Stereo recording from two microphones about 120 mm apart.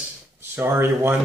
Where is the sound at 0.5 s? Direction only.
20° right (ahead or behind).